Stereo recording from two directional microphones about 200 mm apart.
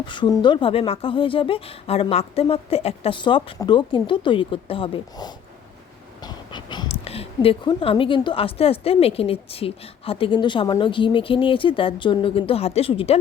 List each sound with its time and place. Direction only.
0.0 s speech: 25° left (ahead or behind)